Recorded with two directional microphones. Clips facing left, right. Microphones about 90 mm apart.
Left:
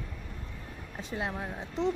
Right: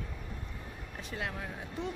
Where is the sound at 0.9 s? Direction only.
20° left (ahead or behind).